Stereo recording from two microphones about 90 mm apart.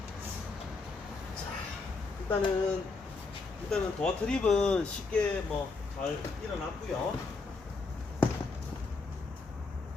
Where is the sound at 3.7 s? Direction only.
10° left (ahead or behind).